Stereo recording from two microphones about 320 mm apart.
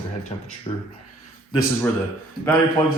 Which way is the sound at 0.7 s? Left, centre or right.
Centre.